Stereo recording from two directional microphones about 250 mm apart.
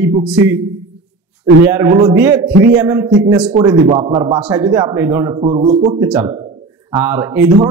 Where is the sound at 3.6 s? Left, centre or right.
Centre.